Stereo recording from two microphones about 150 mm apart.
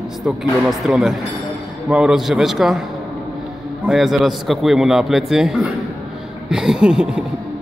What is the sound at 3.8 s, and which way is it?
A man's voice, 5° right (ahead or behind).